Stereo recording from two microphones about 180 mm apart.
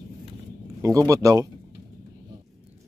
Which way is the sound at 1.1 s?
20° right (ahead or behind).